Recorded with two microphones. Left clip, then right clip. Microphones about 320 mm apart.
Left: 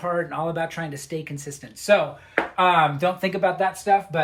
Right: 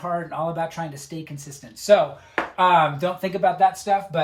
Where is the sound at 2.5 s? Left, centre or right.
Centre.